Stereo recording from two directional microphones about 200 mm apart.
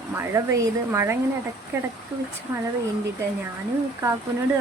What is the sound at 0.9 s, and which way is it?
Speech, 15° right (ahead or behind).